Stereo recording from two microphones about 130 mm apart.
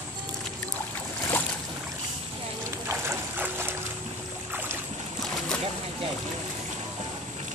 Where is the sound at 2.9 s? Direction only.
15° right (ahead or behind).